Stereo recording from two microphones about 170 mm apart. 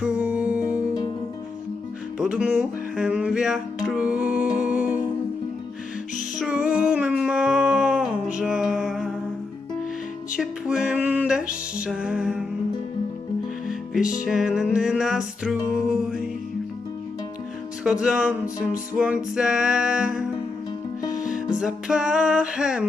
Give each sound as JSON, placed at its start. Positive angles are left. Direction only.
{"t": 0.0, "sound": "music", "side_deg": -5}
{"t": 2.1, "sound": "music", "side_deg": -5}
{"t": 6.4, "sound": "a sound", "side_deg": -5}
{"t": 10.3, "sound": "music", "side_deg": -5}
{"t": 13.7, "sound": "music", "side_deg": -5}
{"t": 18.0, "sound": "music", "side_deg": -5}
{"t": 21.1, "sound": "music", "side_deg": 50}
{"t": 21.5, "sound": "music", "side_deg": -5}